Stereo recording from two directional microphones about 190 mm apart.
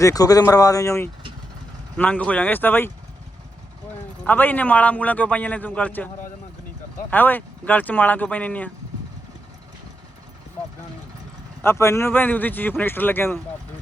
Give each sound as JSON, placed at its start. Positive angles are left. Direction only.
{"t": 0.0, "sound": "a man's voice", "side_deg": 20}
{"t": 4.2, "sound": "a man's voice", "side_deg": 10}
{"t": 7.1, "sound": "a man's voice", "side_deg": 10}
{"t": 11.6, "sound": "a man's voice", "side_deg": 15}